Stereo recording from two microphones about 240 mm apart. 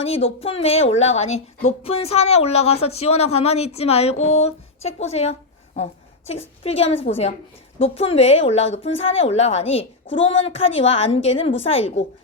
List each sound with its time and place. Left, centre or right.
0.0 s speech: left
10.1 s speech: left
10.4 s speech: left